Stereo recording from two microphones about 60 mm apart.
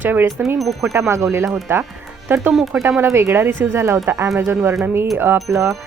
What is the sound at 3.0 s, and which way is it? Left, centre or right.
Speech, right.